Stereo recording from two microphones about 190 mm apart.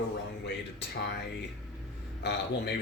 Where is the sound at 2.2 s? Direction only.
60° left (ahead or behind).